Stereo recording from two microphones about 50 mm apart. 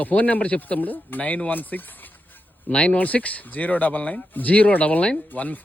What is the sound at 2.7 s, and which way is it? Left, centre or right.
Speech, left.